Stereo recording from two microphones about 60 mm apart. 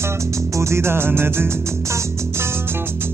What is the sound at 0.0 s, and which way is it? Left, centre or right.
Music, right.